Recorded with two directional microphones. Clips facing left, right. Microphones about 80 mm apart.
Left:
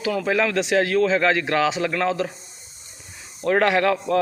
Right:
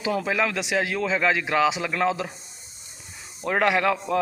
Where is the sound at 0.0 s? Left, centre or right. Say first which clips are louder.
Left 2 dB; centre.